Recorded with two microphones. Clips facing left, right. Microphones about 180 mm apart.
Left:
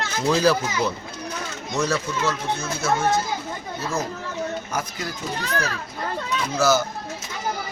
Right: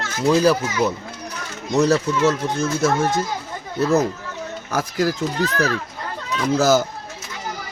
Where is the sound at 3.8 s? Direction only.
65° right (ahead or behind).